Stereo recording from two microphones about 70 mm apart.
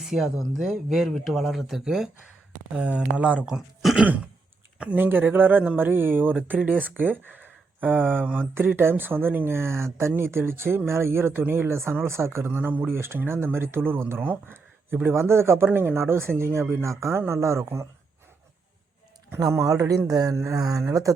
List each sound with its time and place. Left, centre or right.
0.0 s speech: centre
2.7 s speech: centre
3.4 s speech: centre
4.9 s speech: right
11.7 s speech: right
12.5 s speech: right
14.2 s a sound: right
15.0 s speech: right
19.4 s speech: right
20.3 s a sound: right